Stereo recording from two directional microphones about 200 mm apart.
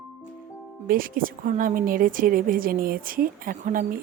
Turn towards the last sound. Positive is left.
turn(degrees=-45)  # may be behind; listen again after turning